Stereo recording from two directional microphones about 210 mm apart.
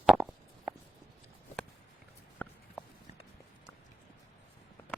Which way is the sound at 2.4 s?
5° left (ahead or behind).